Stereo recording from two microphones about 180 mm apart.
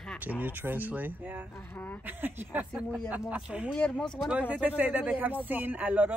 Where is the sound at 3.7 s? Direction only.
5° left (ahead or behind).